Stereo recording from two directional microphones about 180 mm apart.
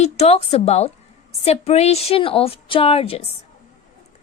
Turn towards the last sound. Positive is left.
turn(degrees=35)  # may be behind; listen again after turning